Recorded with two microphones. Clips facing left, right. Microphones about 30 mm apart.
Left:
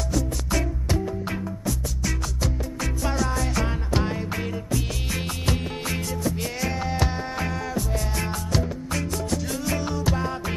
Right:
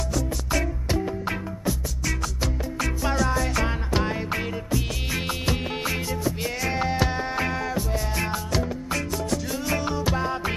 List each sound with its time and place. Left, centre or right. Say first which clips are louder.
0.1 s music: left 1 dB; centre
2.4 s music: right 1 dB; centre
6.7 s music: right 5 dB; right
7.9 s music: right 1 dB; centre